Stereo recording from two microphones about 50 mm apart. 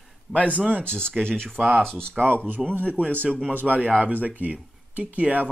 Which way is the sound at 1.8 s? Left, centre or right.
Centre.